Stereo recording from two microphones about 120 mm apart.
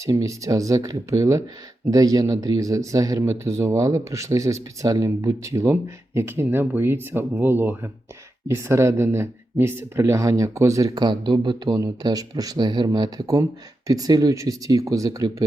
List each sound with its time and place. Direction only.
0.0 s speech: 25° right (ahead or behind)